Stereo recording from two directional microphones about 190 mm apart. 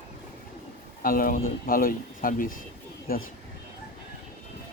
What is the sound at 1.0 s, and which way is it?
Speech, 50° left (ahead or behind).